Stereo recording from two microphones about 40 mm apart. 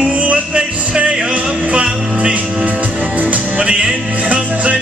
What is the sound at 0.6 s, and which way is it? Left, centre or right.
Music, right.